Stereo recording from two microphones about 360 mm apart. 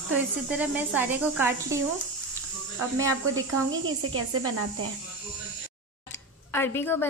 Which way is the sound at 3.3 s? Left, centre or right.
Right.